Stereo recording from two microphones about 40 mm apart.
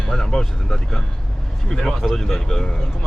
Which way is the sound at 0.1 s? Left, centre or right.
Centre.